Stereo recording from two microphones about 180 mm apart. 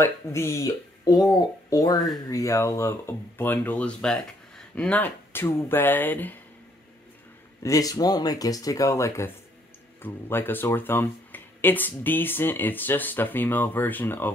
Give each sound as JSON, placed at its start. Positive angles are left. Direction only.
{"t": 0.0, "sound": "speech", "side_deg": 15}
{"t": 7.6, "sound": "speech", "side_deg": 20}